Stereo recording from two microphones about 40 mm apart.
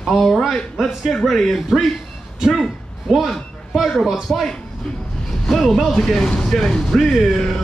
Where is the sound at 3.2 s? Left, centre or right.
Centre.